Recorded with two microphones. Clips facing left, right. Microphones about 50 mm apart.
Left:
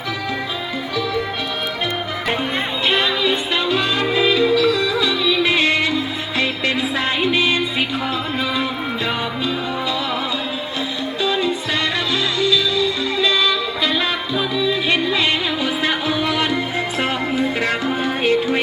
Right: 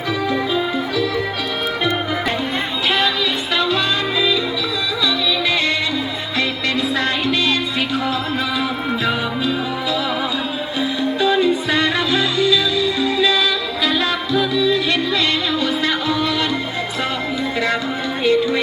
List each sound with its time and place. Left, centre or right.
3.2 s music: centre
4.2 s music: left
6.9 s music: centre
9.0 s music: centre
10.8 s music: centre; by 18.6 s left